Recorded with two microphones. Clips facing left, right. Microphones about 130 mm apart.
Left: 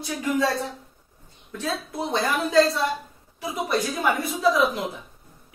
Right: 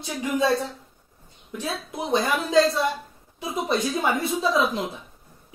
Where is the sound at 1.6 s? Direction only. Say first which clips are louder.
Left 2 dB; 15° right (ahead or behind).